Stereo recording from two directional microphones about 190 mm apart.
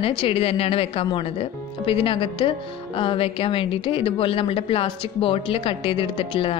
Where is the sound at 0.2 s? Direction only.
30° left (ahead or behind).